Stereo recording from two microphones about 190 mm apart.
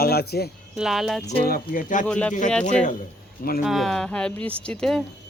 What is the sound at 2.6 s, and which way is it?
Speech, 40° left (ahead or behind).